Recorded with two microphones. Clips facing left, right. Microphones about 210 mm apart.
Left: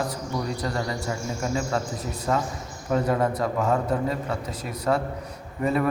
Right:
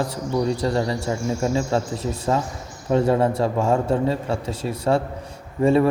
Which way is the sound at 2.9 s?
30° right (ahead or behind).